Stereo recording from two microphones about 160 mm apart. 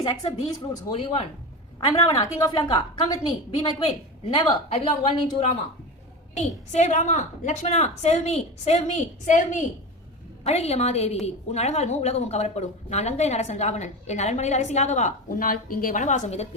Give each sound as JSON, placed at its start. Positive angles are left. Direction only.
{"t": 0.0, "sound": "a woman's voice", "side_deg": 25}
{"t": 0.9, "sound": "a woman's voice", "side_deg": 35}
{"t": 1.9, "sound": "a woman's voice", "side_deg": 25}
{"t": 6.3, "sound": "a woman's voice", "side_deg": 45}